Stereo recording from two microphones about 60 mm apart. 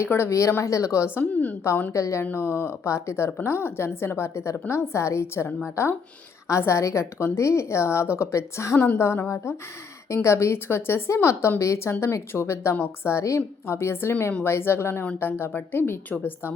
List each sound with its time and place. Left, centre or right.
0.0 s a woman's voice: left
1.2 s a woman's voice: left
1.9 s a woman's voice: left
2.3 s a woman's voice: left
16.0 s a woman's voice: left